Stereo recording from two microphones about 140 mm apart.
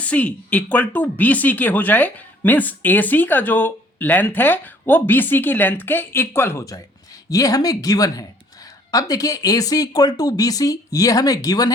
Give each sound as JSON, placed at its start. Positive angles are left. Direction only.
{"t": 0.0, "sound": "speech", "side_deg": 10}